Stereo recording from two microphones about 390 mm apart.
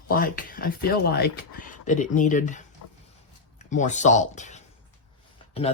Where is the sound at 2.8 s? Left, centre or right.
Left.